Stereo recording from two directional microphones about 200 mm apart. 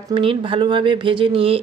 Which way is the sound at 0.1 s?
25° right (ahead or behind).